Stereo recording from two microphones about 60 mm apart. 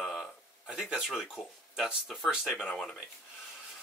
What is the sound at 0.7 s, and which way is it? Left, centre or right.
Speech, centre.